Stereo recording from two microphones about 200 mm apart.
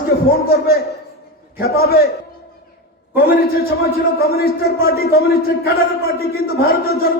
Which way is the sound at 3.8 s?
50° left (ahead or behind).